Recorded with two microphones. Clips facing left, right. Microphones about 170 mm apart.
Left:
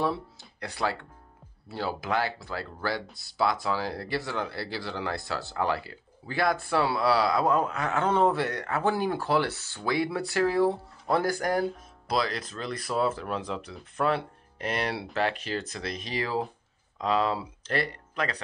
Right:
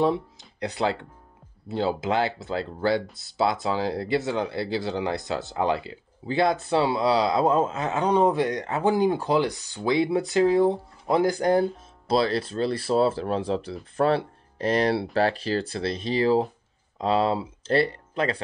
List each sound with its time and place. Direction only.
0.0 s speech: 20° right (ahead or behind)